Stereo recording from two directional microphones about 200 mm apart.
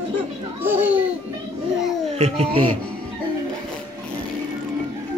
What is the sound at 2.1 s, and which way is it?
Speech, 30° right (ahead or behind).